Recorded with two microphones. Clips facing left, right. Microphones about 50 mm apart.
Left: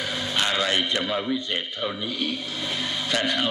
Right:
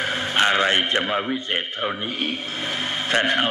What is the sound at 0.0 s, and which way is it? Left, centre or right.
A man's voice, right.